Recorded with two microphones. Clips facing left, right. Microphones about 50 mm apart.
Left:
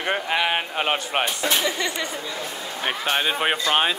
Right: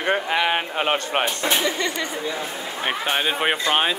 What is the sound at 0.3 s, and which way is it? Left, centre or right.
Speech, centre.